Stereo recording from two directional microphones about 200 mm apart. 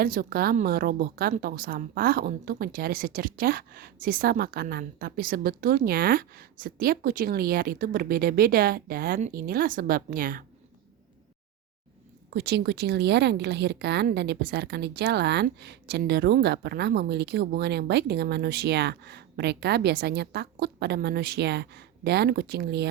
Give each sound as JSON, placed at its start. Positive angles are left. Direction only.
{"t": 0.0, "sound": "a woman's voice", "side_deg": -50}
{"t": 12.3, "sound": "speech", "side_deg": -55}